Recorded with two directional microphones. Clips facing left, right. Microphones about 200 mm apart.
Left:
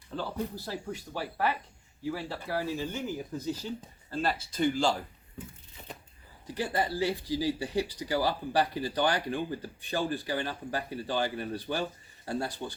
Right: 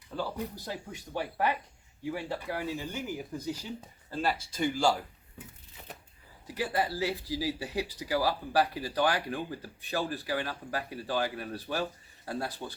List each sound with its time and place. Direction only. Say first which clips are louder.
0.2 s speech: even; 15° right (ahead or behind)
6.5 s speech: even; 5° right (ahead or behind)